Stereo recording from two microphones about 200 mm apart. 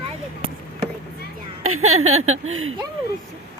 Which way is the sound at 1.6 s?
90° right.